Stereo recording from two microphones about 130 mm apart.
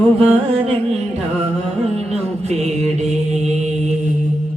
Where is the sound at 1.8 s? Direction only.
55° right (ahead or behind).